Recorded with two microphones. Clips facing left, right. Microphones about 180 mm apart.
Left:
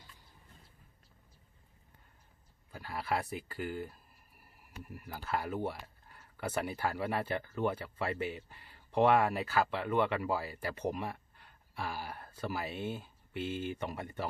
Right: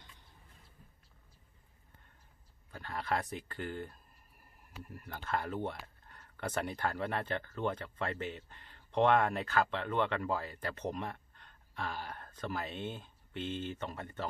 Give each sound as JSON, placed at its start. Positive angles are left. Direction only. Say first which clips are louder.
{"t": 2.7, "sound": "speech", "louder": "even", "side_deg": 5}